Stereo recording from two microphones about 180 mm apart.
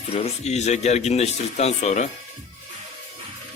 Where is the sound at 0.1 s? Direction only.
35° left (ahead or behind).